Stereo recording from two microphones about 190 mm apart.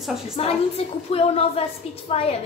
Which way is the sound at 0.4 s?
30° left (ahead or behind).